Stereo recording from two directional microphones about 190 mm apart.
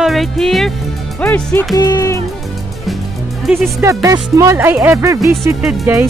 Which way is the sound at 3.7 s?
15° right (ahead or behind).